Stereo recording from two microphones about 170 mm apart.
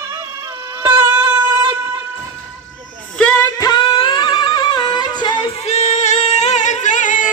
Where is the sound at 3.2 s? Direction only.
5° left (ahead or behind).